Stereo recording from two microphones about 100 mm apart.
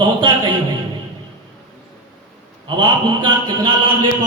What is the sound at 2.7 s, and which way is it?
Speech, 55° right (ahead or behind).